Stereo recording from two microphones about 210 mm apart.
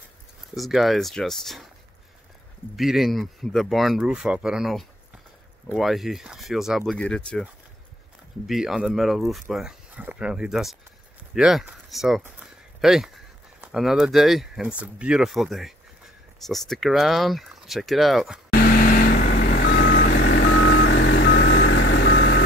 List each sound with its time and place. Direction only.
0.6 s speech: centre (ahead or behind)
2.7 s speech: centre (ahead or behind)
8.5 s speech: centre (ahead or behind)
18.5 s vehicle: 45° left (ahead or behind)